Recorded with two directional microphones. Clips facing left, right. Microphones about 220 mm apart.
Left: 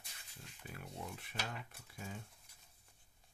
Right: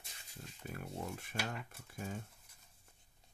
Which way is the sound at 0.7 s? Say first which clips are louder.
Right 5 dB; 45° right (ahead or behind).